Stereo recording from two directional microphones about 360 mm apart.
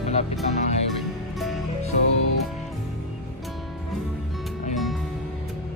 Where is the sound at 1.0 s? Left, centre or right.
Centre.